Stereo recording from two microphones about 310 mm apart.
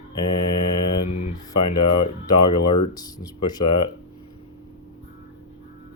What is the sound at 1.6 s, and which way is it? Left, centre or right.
Mantra, left.